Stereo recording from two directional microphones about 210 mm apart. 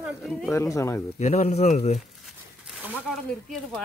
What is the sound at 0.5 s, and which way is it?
Speech, 15° left (ahead or behind).